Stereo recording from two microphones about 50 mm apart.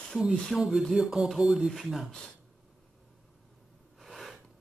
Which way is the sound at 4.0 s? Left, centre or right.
Centre.